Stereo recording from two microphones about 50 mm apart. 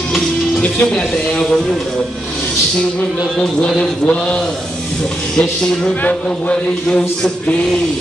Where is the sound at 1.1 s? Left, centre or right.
Centre.